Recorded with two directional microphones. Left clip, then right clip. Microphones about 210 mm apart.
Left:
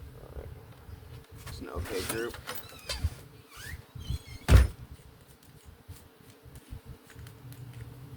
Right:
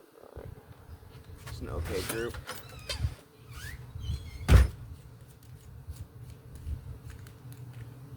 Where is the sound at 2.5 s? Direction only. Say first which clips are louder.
Left 1 dB; 35° left (ahead or behind).